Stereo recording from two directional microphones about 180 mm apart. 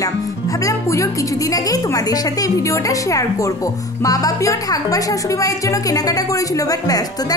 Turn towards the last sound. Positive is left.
turn(degrees=20)  # may be behind; listen again after turning